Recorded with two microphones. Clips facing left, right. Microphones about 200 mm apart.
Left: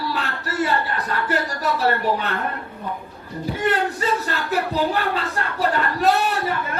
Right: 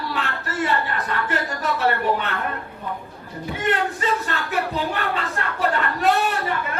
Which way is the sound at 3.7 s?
40° left (ahead or behind).